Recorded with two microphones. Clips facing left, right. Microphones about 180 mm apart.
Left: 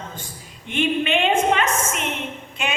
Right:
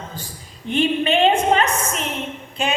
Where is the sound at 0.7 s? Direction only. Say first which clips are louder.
Right 3 dB; 35° right (ahead or behind).